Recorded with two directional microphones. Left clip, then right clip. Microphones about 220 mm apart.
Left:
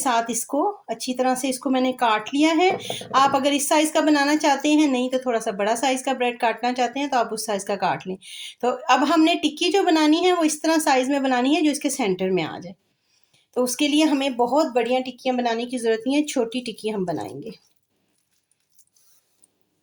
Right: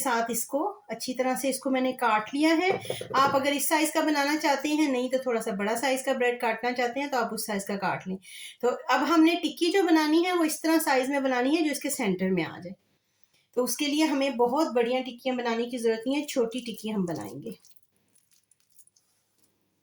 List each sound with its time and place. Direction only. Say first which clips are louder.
0.0 s a woman's voice: left 5 dB; 45° left (ahead or behind)
13.5 s a woman's voice: left 6 dB; 45° left (ahead or behind)